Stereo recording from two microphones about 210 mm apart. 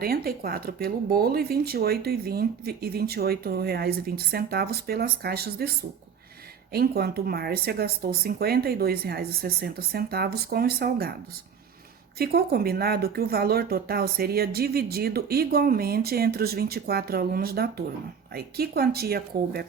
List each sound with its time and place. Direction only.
0.0 s speech: 45° right (ahead or behind)
6.7 s speech: 50° right (ahead or behind)
12.2 s speech: 50° right (ahead or behind)